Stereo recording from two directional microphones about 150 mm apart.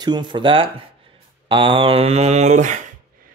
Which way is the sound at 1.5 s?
35° right (ahead or behind).